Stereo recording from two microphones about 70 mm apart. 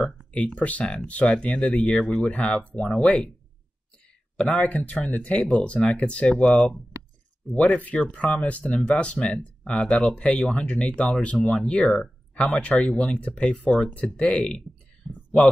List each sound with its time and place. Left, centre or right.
0.6 s speech: centre
4.4 s speech: centre
4.6 s speech: left
15.0 s a sound: centre